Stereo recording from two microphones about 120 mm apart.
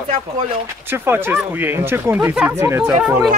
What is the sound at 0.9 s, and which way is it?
Speech, 20° right (ahead or behind).